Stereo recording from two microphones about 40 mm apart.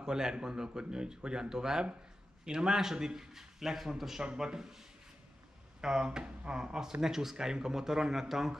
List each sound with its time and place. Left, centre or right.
0.0 s speech: centre
4.2 s speech: centre
5.8 s speech: centre